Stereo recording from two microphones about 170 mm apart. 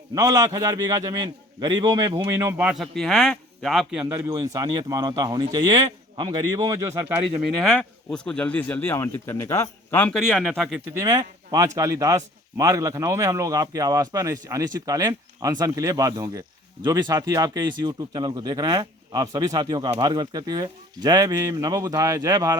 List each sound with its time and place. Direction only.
0.1 s a man's voice: 20° right (ahead or behind); by 4.0 s centre (ahead or behind)
4.0 s speech: 20° right (ahead or behind)
7.6 s speech: 5° left (ahead or behind)
10.9 s speech: 20° right (ahead or behind)